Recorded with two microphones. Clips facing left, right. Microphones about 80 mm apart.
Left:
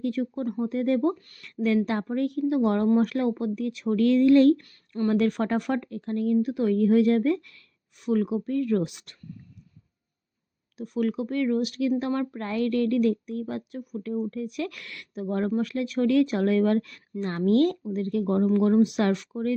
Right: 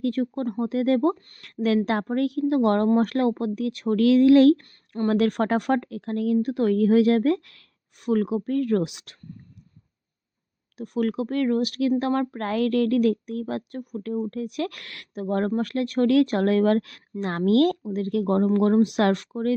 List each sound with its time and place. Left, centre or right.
0.0 s speech: right
0.6 s speech: right
2.6 s speech: right
10.8 s speech: right
13.4 s speech: right
18.4 s speech: right